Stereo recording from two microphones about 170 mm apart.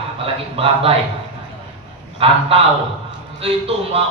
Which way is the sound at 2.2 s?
35° right (ahead or behind).